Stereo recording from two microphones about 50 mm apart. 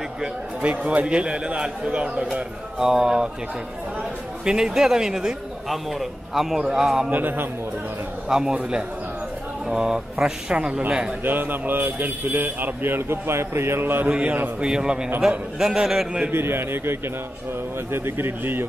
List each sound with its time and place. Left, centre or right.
0.6 s a man's voice: right
4.5 s a man's voice: centre
7.1 s speech: right
8.3 s a man's voice: centre
9.7 s a man's voice: centre
11.2 s speech: right
14.6 s a man's voice: centre
16.3 s a man's voice: right